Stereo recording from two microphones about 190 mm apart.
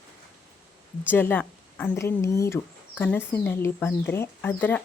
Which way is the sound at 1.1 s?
10° left (ahead or behind).